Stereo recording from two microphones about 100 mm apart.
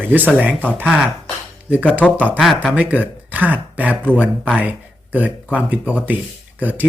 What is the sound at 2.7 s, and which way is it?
Speech, 15° right (ahead or behind).